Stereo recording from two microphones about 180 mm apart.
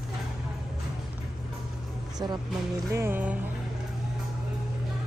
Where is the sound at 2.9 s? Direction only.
15° right (ahead or behind).